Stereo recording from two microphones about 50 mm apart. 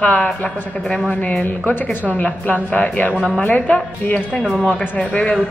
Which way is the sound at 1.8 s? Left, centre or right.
Left.